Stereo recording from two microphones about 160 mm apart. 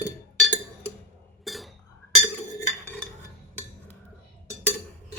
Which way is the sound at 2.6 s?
10° left (ahead or behind).